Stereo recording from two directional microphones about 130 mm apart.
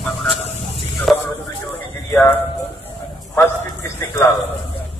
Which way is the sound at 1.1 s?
Centre (ahead or behind).